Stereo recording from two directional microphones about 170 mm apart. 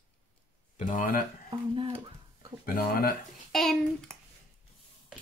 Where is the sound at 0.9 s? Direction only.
55° left (ahead or behind).